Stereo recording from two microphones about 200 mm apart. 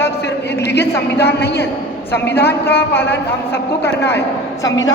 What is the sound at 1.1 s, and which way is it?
Speech, 55° left (ahead or behind).